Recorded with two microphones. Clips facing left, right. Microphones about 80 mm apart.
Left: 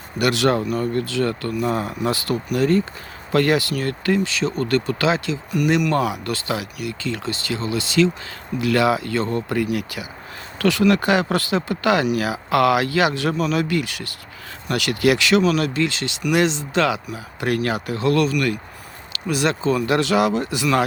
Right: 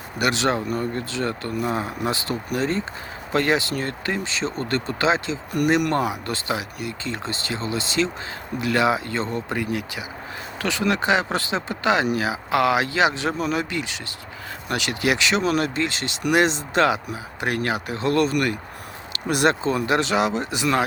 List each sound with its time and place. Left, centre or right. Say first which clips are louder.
0.3 s speech: left 3 dB; right
5.5 s speech: left 1 dB; right
6.1 s speech: left 2 dB; right
15.4 s speech: left 2 dB; right
17.4 s speech: left 3 dB; right